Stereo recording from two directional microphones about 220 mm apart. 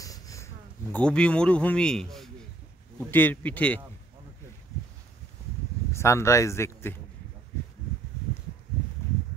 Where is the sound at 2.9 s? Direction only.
10° left (ahead or behind).